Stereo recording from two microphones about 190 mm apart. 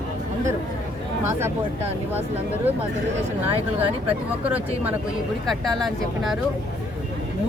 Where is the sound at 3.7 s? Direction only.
10° right (ahead or behind).